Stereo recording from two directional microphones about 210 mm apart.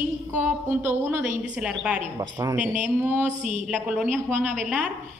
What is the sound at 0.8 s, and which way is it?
A woman's voice, 10° right (ahead or behind).